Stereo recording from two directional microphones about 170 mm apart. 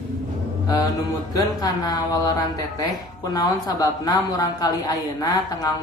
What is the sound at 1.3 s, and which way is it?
A woman's voice, 20° left (ahead or behind).